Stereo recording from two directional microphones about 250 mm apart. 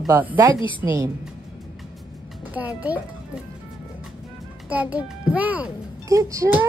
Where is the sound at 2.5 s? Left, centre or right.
Centre.